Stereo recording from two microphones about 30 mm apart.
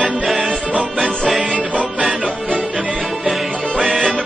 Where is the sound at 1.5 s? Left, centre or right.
Right.